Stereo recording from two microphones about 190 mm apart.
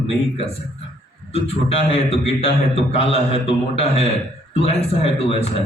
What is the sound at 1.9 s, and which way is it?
A man's voice, 30° left (ahead or behind).